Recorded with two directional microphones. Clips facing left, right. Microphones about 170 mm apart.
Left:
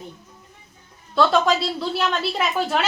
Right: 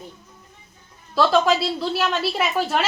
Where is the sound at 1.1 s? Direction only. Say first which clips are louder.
Even; centre (ahead or behind).